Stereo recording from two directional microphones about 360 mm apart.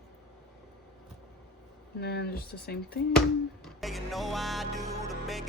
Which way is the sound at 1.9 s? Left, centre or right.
Left.